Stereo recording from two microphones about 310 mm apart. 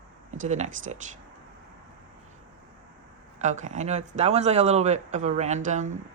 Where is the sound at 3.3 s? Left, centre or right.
Right.